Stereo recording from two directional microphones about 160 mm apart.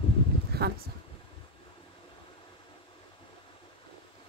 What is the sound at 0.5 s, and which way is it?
Speech, 80° right.